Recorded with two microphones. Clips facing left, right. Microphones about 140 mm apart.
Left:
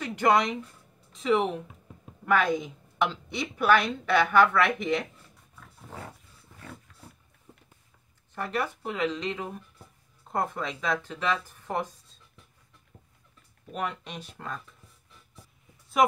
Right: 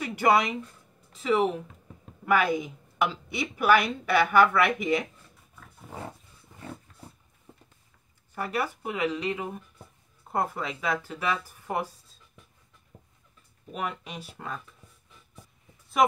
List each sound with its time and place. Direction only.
0.0 s a woman's voice: 10° right (ahead or behind)
5.6 s roaring cats: centre (ahead or behind)
6.5 s a sound: 25° right (ahead or behind)
8.4 s a woman's voice: 10° right (ahead or behind)
12.9 s a sound: 15° right (ahead or behind)
13.7 s speech: 5° right (ahead or behind)